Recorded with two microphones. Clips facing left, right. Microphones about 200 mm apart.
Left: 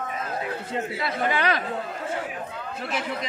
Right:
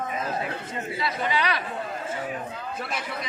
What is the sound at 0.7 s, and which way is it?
Speech, 55° left (ahead or behind).